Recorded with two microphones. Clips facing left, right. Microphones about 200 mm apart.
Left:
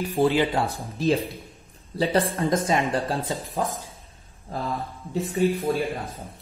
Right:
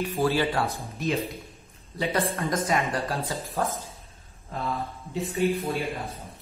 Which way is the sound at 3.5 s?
15° left (ahead or behind).